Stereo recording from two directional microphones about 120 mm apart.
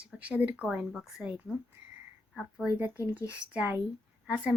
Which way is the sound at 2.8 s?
15° right (ahead or behind).